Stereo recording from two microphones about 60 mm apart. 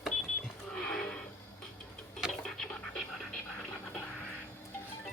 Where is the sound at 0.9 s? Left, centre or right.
Centre.